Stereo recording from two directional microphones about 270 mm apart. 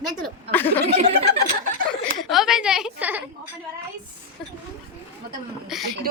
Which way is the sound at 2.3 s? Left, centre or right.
Centre.